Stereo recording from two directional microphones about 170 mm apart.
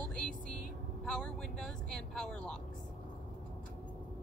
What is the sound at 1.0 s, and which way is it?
Speech, 5° left (ahead or behind).